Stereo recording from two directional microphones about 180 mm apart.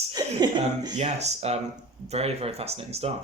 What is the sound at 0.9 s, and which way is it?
Speech, 40° right (ahead or behind).